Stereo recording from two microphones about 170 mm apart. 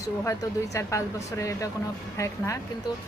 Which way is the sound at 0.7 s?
15° left (ahead or behind).